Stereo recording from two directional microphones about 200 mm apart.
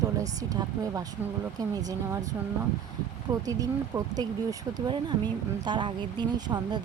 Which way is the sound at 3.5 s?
15° right (ahead or behind).